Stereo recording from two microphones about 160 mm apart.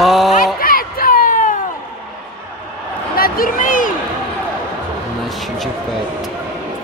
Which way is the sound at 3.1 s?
65° left (ahead or behind).